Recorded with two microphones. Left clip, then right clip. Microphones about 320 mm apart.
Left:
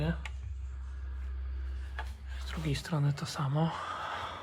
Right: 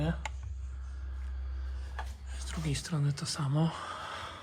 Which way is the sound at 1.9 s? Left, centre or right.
Centre.